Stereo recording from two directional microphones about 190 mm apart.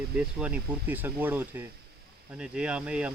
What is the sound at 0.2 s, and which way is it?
Speech, 5° right (ahead or behind).